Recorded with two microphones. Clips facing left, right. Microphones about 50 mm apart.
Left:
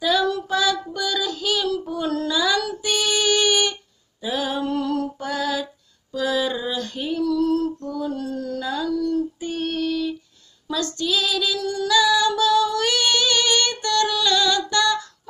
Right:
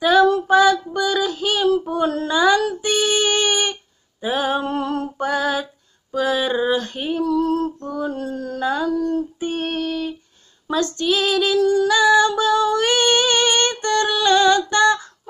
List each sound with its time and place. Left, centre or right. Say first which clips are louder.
0.0 s female singing: right 6 dB; right